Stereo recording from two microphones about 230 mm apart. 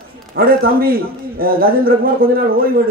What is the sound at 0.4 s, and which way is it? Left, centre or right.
A man's voice, right.